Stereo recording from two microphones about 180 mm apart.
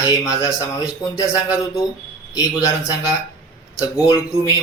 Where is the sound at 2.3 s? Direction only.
20° left (ahead or behind).